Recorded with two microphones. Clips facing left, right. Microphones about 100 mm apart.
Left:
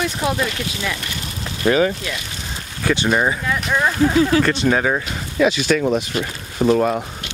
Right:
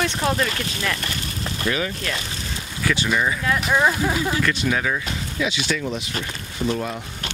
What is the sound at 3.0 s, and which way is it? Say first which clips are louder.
Speech: left 5 dB; 40° left (ahead or behind).